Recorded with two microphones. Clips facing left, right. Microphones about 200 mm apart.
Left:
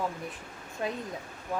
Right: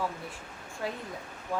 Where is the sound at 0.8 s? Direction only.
20° left (ahead or behind).